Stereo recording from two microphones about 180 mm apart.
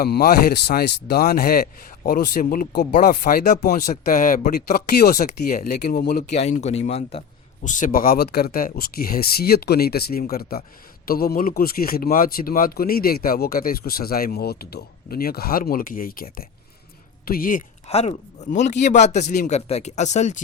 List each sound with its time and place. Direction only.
0.3 s a man's voice: 65° left (ahead or behind); by 3.6 s 45° left (ahead or behind)
3.6 s a man's voice: 60° left (ahead or behind)
6.3 s a man's voice: 35° left (ahead or behind); by 17.6 s 55° left (ahead or behind)
17.8 s speech: 35° left (ahead or behind)